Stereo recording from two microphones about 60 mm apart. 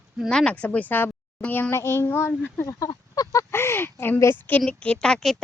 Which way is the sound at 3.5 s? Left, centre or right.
Left.